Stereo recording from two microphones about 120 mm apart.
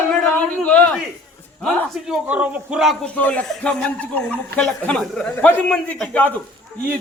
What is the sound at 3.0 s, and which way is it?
Speech, 10° left (ahead or behind).